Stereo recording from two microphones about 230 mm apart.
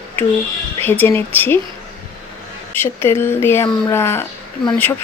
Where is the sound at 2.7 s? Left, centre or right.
Centre.